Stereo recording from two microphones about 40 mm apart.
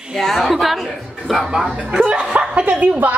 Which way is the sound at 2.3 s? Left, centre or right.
Right.